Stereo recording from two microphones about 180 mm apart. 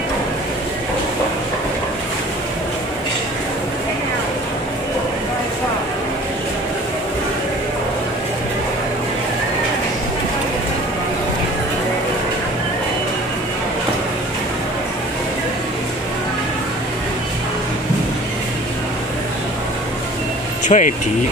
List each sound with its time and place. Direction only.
20.6 s speech: 40° left (ahead or behind)